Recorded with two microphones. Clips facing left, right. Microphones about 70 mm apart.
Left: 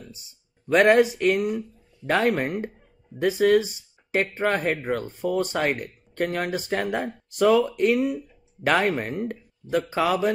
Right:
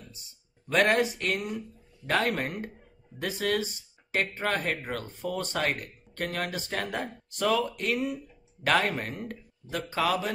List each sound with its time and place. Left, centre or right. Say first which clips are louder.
0.7 s speech: left 7 dB; centre